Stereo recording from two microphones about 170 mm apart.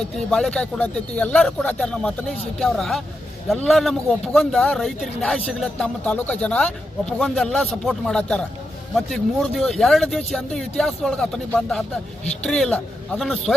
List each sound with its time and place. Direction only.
0.3 s a man's voice: 5° left (ahead or behind)
12.2 s speech: 40° left (ahead or behind)
12.5 s a man's voice: 5° left (ahead or behind)